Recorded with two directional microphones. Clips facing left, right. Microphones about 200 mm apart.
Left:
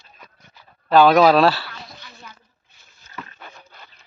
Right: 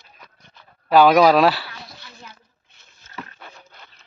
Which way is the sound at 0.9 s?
15° right (ahead or behind).